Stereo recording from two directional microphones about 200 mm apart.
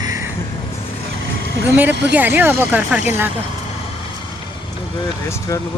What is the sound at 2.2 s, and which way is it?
Speech, 10° right (ahead or behind).